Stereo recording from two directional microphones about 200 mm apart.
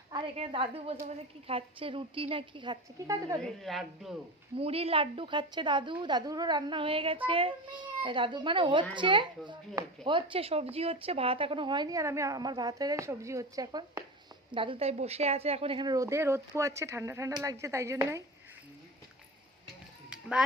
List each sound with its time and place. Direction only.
0.1 s speech: 25° right (ahead or behind)
3.4 s a woman's voice: centre (ahead or behind)
4.5 s speech: 30° right (ahead or behind)
20.1 s music: 5° right (ahead or behind)